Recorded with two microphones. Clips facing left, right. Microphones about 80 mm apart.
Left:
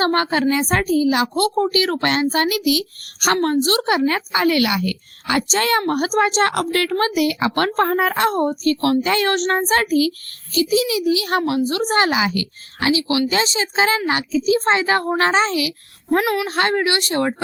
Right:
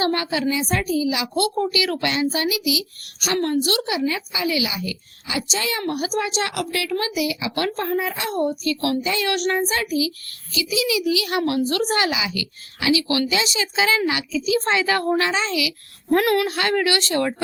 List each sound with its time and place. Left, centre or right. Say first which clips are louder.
0.0 s a woman's voice: left 4 dB; left
3.4 s a woman's voice: left 1 dB; left
3.8 s a woman's voice: left 5 dB; left
9.0 s a woman's voice: left 4 dB; left
10.5 s a woman's voice: left 5 dB; left
11.4 s a woman's voice: left 1 dB; left
13.2 s a woman's voice: left 3 dB; left
15.2 s a woman's voice: left 5 dB; left
16.2 s a woman's voice: right 1 dB; centre
16.5 s speech: left 2 dB; left